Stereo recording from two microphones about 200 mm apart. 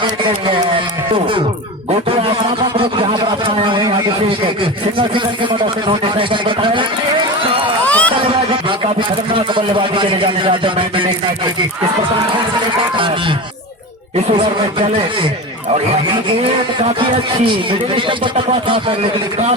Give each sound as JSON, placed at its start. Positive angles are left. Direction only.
{"t": 0.0, "sound": "a man's voice", "side_deg": -25}
{"t": 2.0, "sound": "a sound", "side_deg": -25}
{"t": 4.9, "sound": "a man's voice", "side_deg": -25}
{"t": 7.9, "sound": "a sound", "side_deg": 5}
{"t": 8.8, "sound": "a man's voice", "side_deg": -25}
{"t": 14.3, "sound": "a man's voice", "side_deg": -25}
{"t": 17.7, "sound": "a man's voice", "side_deg": -25}